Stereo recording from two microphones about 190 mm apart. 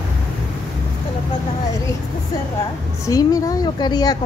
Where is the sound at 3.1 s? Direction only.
20° left (ahead or behind).